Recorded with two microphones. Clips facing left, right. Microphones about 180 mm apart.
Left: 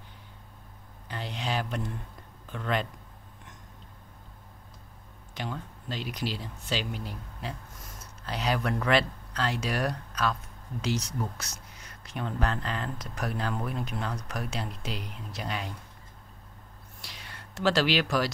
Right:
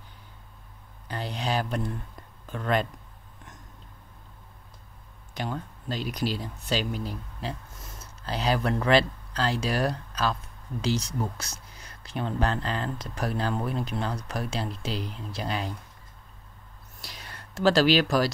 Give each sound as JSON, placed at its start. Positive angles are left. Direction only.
{"t": 1.0, "sound": "a sound", "side_deg": -40}
{"t": 2.5, "sound": "speech", "side_deg": -45}
{"t": 5.3, "sound": "speech", "side_deg": -40}
{"t": 17.0, "sound": "speech", "side_deg": -40}